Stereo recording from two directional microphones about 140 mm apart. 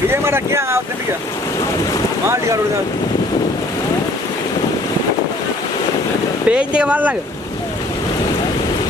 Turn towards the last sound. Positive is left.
turn(degrees=-10)  # may be behind; listen again after turning